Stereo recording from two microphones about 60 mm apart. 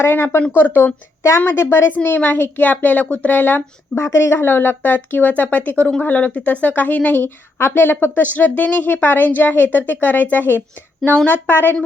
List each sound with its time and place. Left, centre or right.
0.0 s a woman's voice: left
3.9 s a woman's voice: left